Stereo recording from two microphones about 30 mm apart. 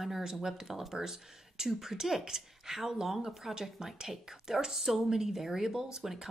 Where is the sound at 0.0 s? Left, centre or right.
Centre.